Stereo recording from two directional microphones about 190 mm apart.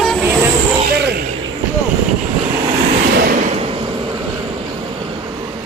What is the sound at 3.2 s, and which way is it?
Vehicle, 45° right (ahead or behind).